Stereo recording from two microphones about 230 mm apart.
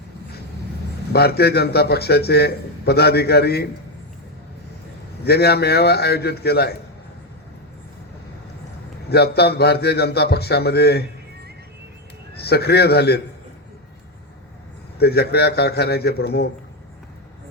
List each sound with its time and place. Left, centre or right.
1.1 s a man's voice: left
5.2 s a man's voice: left
9.0 s a man's voice: left
12.5 s a man's voice: left
14.9 s a man's voice: left